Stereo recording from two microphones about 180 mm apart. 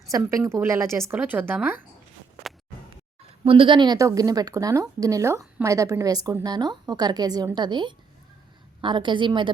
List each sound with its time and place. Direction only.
0.1 s a woman's voice: 20° right (ahead or behind)
3.4 s a woman's voice: 30° right (ahead or behind)